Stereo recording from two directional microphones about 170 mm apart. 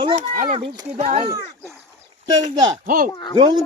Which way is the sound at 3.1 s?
25° left (ahead or behind).